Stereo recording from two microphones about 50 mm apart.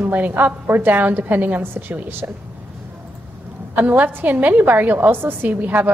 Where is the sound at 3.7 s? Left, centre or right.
Right.